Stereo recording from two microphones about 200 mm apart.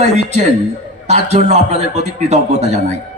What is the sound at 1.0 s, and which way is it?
Speech, 35° right (ahead or behind).